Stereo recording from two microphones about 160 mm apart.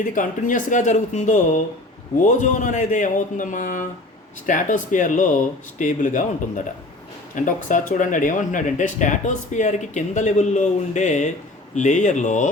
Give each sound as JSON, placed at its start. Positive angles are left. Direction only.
{"t": 0.0, "sound": "speech", "side_deg": 55}
{"t": 7.3, "sound": "speech", "side_deg": 55}